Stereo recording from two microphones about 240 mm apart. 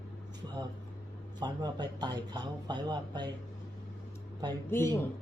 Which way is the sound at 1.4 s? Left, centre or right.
Centre.